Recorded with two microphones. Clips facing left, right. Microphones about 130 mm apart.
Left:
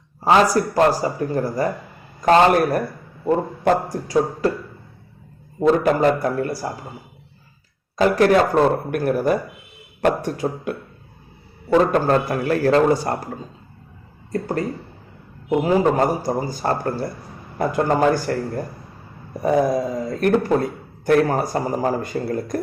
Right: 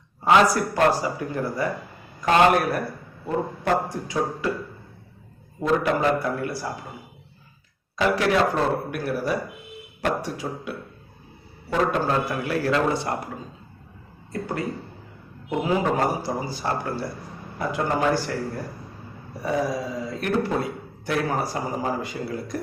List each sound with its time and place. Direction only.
0.3 s a man's voice: 35° left (ahead or behind)
5.5 s a man's voice: 40° left (ahead or behind)
7.9 s speech: 45° left (ahead or behind)
11.9 s speech: 50° left (ahead or behind)
15.4 s speech: 40° left (ahead or behind)